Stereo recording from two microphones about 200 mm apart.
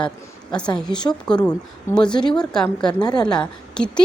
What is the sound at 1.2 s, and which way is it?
A woman's voice, 5° left (ahead or behind).